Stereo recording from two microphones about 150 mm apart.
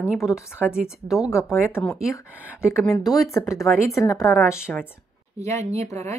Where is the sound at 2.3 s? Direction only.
10° right (ahead or behind).